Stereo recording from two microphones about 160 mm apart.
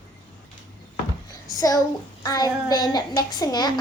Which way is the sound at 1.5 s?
20° left (ahead or behind).